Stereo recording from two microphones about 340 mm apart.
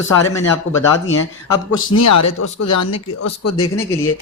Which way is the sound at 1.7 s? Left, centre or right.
Left.